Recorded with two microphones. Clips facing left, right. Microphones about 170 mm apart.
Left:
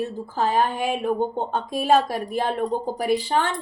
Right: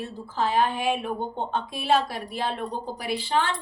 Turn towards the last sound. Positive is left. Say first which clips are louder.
# left 4 dB
turn(degrees=45)  # may be behind; listen again after turning